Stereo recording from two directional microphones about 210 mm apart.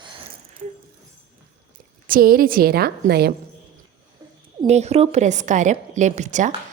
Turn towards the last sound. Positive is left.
turn(degrees=-35)  # may be behind; listen again after turning